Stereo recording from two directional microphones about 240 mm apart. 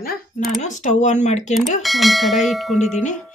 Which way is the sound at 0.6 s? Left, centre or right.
Left.